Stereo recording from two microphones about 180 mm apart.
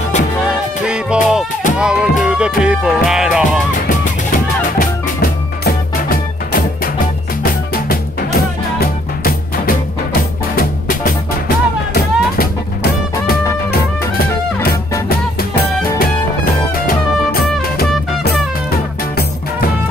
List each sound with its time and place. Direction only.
0.8 s music: 5° right (ahead or behind)
4.3 s music: 50° left (ahead or behind)
14.7 s music: 60° left (ahead or behind)
16.8 s music: 55° left (ahead or behind)